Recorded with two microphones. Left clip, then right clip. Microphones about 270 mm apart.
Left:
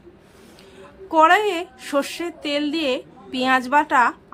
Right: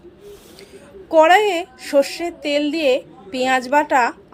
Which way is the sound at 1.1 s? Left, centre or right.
Centre.